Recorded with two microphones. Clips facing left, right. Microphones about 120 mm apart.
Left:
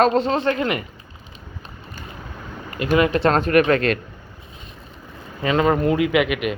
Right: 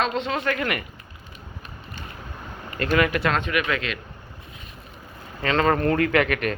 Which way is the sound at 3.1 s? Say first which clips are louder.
Left 6 dB; 30° left (ahead or behind).